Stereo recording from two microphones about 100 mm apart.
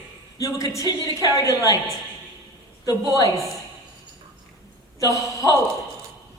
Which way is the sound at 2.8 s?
35° left (ahead or behind).